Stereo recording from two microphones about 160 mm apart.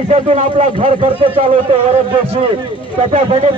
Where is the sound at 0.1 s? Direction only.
45° right (ahead or behind).